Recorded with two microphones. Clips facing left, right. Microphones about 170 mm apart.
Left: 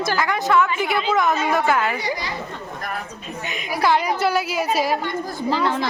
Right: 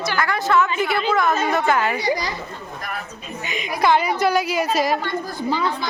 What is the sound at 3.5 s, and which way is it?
A woman's voice, 5° left (ahead or behind).